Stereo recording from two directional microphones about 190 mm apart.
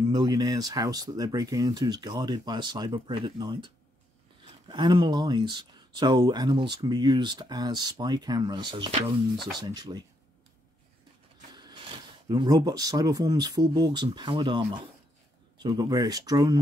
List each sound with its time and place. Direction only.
0.1 s speech: 20° right (ahead or behind)
11.5 s speech: 20° right (ahead or behind)
15.6 s speech: 20° right (ahead or behind)